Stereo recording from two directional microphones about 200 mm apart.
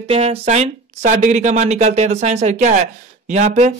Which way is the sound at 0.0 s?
30° right (ahead or behind).